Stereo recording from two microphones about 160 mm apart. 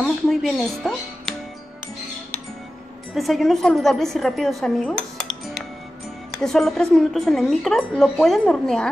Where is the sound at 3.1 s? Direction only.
Centre (ahead or behind).